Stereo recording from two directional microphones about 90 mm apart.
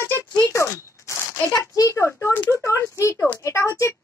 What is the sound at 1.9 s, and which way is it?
Speech, 30° left (ahead or behind).